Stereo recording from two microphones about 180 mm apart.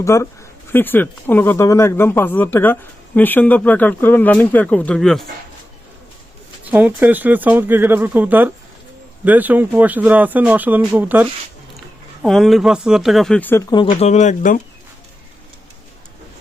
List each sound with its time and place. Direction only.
0.0 s speech: 15° left (ahead or behind)
6.7 s speech: 10° right (ahead or behind)
12.2 s speech: centre (ahead or behind)
13.7 s speech: 30° left (ahead or behind); by 14.6 s 45° left (ahead or behind)